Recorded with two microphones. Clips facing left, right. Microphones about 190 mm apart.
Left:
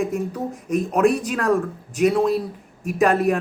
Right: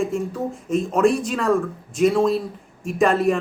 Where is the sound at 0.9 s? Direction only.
5° left (ahead or behind).